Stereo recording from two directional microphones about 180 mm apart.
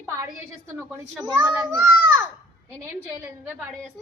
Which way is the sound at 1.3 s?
10° right (ahead or behind).